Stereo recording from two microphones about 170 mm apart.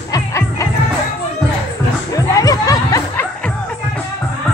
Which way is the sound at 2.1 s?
20° left (ahead or behind).